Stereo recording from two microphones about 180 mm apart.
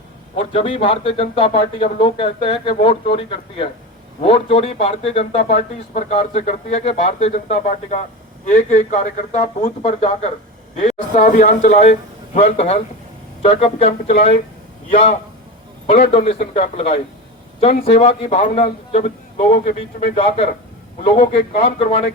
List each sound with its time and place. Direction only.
0.3 s a man's voice: 30° left (ahead or behind)
16.1 s speech: 35° left (ahead or behind)